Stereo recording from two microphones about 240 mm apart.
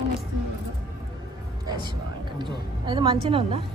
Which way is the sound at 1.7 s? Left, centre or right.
Centre.